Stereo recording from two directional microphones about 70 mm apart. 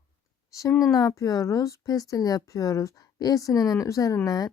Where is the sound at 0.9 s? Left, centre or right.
Left.